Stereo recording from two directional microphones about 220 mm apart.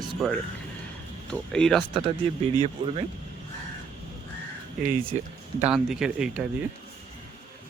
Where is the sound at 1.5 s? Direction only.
5° left (ahead or behind).